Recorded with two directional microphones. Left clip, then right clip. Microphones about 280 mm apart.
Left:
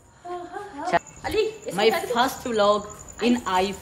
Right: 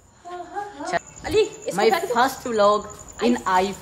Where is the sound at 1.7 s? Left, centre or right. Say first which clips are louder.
Right 3 dB; right.